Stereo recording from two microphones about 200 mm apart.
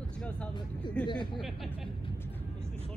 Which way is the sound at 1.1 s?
25° left (ahead or behind).